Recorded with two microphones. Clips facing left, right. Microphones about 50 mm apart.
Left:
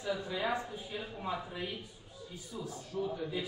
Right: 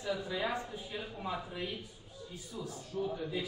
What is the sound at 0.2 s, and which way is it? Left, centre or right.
Speech, centre.